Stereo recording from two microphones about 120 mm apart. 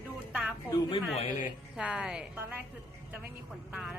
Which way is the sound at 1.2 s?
90° left.